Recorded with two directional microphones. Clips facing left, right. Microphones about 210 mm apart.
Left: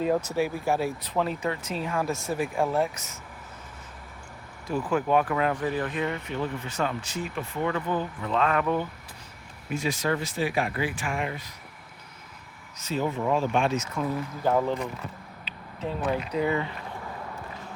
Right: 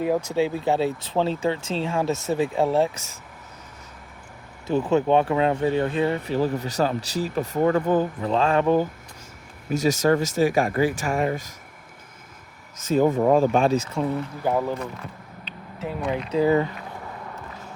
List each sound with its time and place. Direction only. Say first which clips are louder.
0.0 s speech: right 3 dB; 10° right (ahead or behind)
0.4 s speech: right 4 dB; 20° right (ahead or behind)
4.6 s speech: right 6 dB; 25° right (ahead or behind); by 8.3 s 45° right (ahead or behind)
8.3 s speech: right 5 dB; 30° right (ahead or behind)
12.7 s speech: right 9 dB; 50° right (ahead or behind); by 14.1 s 30° right (ahead or behind)
14.4 s speech: even; 10° right (ahead or behind)
16.3 s speech: right 11 dB; 35° right (ahead or behind)